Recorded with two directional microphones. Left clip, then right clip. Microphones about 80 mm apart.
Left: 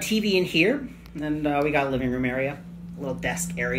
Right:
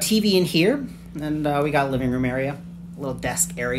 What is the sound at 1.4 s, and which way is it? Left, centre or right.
Speech, right.